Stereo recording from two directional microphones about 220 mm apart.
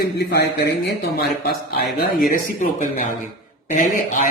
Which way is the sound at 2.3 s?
35° left (ahead or behind).